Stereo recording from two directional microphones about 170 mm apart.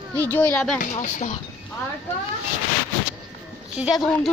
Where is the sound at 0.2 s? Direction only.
10° left (ahead or behind).